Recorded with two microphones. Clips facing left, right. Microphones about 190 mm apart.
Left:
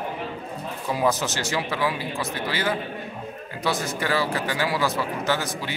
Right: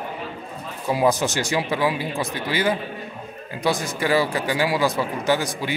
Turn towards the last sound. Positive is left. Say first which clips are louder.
# right 4 dB
turn(degrees=-15)  # may be behind; listen again after turning